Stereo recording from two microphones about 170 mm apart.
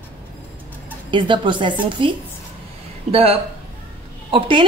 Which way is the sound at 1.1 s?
30° right (ahead or behind).